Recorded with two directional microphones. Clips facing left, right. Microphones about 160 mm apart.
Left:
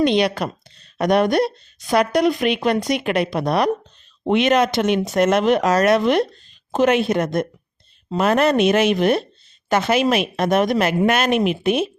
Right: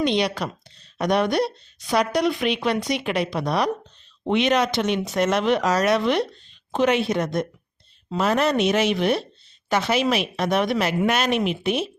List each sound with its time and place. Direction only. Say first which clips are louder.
0.0 s a woman's voice: left 5 dB; 55° left (ahead or behind)